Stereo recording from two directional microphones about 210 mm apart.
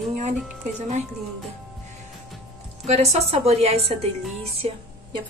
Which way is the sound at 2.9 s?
30° right (ahead or behind).